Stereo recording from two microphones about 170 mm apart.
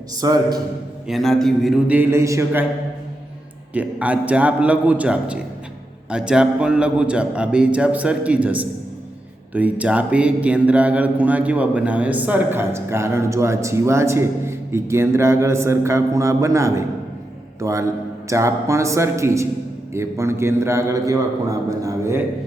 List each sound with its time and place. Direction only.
0.2 s a man's voice: 20° right (ahead or behind)
1.0 s a man's voice: centre (ahead or behind)
2.0 s speech: 15° right (ahead or behind)
3.8 s speech: 10° right (ahead or behind)